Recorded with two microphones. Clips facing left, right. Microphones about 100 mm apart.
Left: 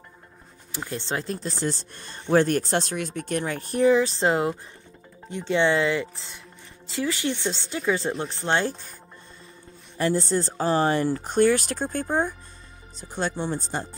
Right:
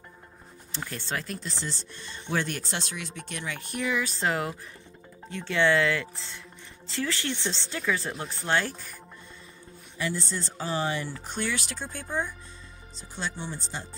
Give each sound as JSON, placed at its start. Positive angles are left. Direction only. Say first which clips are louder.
{"t": 0.7, "sound": "speech", "louder": "left 4 dB", "side_deg": 20}
{"t": 9.9, "sound": "speech", "louder": "left 9 dB", "side_deg": 40}